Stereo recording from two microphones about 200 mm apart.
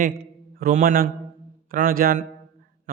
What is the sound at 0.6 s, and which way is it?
A man's voice, 45° right (ahead or behind).